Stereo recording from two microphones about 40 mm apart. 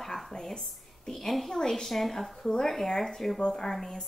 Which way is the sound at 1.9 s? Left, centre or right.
Centre.